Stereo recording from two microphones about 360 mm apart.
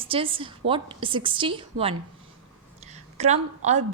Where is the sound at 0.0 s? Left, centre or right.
Centre.